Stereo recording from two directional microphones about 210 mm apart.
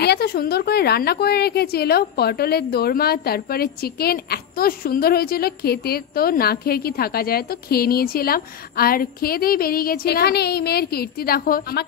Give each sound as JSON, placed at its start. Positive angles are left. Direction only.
{"t": 0.0, "sound": "a woman's voice", "side_deg": 50}